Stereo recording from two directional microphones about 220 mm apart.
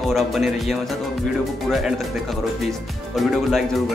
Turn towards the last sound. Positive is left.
turn(degrees=0)  # may be behind; listen again after turning